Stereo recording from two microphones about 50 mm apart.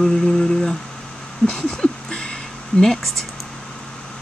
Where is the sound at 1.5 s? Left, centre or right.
Centre.